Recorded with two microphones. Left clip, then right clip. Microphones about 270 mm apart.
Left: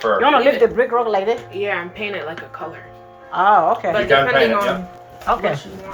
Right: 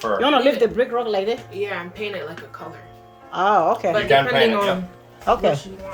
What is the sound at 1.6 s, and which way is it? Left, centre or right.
Speech, centre.